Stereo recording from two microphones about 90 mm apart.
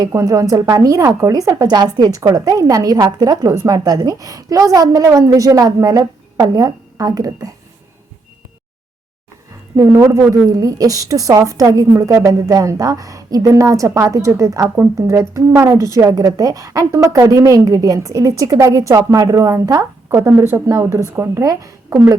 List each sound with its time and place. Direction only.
0.1 s a woman's voice: 35° right (ahead or behind)
9.7 s a woman's voice: 35° right (ahead or behind)
20.1 s a woman's voice: 25° right (ahead or behind)